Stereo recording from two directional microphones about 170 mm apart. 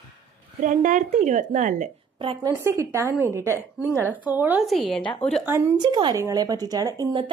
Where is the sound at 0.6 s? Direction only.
50° right (ahead or behind).